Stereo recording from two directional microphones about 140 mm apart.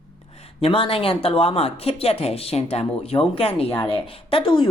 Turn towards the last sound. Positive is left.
turn(degrees=35)  # may be behind; listen again after turning